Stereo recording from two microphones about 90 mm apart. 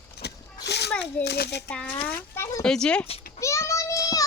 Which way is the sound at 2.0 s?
25° left (ahead or behind).